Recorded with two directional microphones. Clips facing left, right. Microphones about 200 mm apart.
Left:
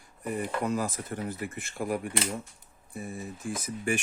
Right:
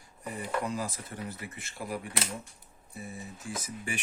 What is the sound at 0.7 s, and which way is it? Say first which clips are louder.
Speech: left 5 dB; 55° left (ahead or behind).